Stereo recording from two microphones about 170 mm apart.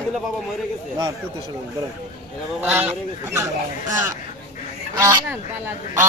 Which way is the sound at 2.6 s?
10° right (ahead or behind).